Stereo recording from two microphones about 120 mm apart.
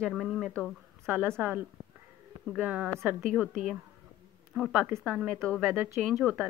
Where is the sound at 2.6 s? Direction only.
10° right (ahead or behind).